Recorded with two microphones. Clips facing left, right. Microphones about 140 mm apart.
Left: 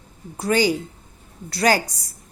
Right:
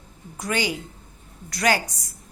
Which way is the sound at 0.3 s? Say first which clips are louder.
Left 7 dB; 35° left (ahead or behind).